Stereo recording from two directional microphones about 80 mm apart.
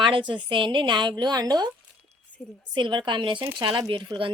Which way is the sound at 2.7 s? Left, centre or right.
Right.